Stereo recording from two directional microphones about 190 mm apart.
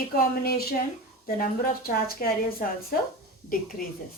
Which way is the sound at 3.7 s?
50° left (ahead or behind).